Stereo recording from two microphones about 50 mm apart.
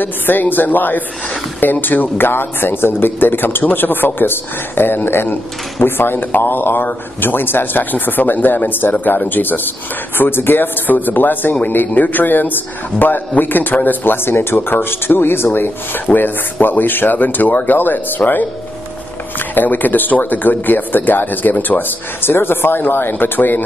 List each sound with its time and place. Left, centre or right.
0.0 s a man's voice: left